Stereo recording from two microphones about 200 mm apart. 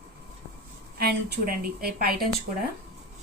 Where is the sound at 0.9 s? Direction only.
50° right (ahead or behind).